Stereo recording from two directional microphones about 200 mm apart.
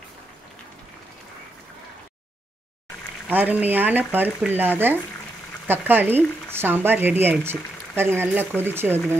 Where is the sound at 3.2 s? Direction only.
10° right (ahead or behind).